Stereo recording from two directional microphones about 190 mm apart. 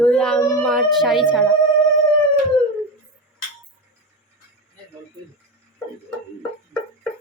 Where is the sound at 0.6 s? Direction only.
Centre (ahead or behind).